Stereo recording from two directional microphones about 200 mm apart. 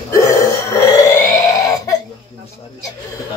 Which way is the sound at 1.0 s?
15° left (ahead or behind).